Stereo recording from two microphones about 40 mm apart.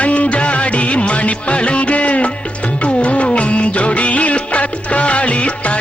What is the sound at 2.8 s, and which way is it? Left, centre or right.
Music of bollywood, left.